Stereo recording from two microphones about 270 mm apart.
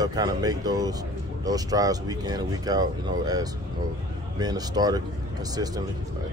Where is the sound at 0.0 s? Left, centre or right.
Centre.